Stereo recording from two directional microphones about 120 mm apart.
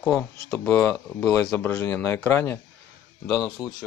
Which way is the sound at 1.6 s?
20° left (ahead or behind).